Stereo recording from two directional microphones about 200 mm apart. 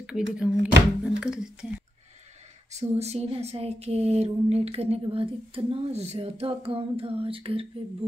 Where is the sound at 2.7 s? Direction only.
30° right (ahead or behind).